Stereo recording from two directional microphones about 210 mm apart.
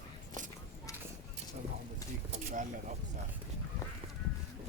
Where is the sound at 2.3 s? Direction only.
35° right (ahead or behind).